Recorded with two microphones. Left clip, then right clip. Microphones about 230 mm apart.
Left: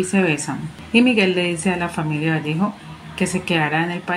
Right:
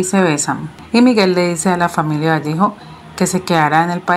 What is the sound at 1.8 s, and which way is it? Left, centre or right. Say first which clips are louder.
Speech: right 8 dB; centre.